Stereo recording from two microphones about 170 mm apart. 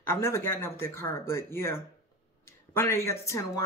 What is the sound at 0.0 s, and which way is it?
Speech, 15° left (ahead or behind).